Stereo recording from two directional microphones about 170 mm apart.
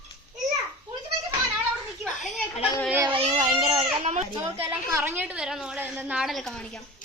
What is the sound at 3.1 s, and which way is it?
Baby cry, 35° right (ahead or behind).